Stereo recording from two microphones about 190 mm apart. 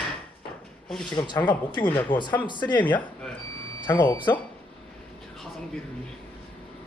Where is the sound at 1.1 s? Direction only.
25° left (ahead or behind).